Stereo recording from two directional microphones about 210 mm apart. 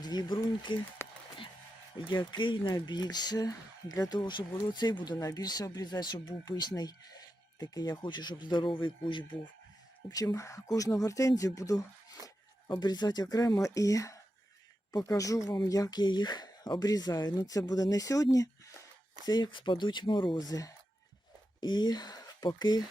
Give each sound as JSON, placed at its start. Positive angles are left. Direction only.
{"t": 0.0, "sound": "speech", "side_deg": 20}
{"t": 1.0, "sound": "a sound", "side_deg": 10}
{"t": 2.0, "sound": "speech", "side_deg": 20}